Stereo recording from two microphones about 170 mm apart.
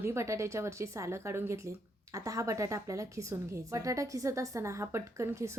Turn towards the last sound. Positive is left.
turn(degrees=-15)  # may be behind; listen again after turning